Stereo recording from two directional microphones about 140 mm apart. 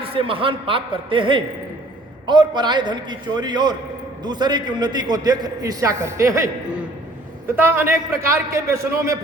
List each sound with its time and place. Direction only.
0.0 s a man's voice: 40° right (ahead or behind); by 9.1 s 20° right (ahead or behind)